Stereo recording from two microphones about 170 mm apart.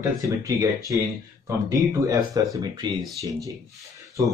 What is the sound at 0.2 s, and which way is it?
Speech, 20° right (ahead or behind).